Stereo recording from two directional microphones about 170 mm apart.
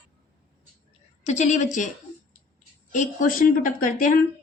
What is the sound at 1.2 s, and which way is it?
Speech, 40° left (ahead or behind).